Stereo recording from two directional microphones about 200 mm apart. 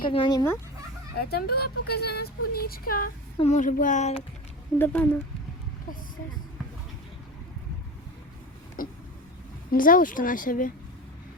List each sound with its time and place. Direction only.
0.0 s speech: 25° left (ahead or behind)
1.1 s speech: 50° left (ahead or behind)
3.3 s speech: 35° left (ahead or behind)
4.8 s speech: 10° left (ahead or behind)
8.8 s a sound: 45° left (ahead or behind)
9.7 s speech: 45° left (ahead or behind)